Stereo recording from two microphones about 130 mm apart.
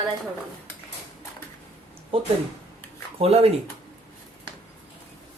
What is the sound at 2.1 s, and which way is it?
Speech, 45° right (ahead or behind).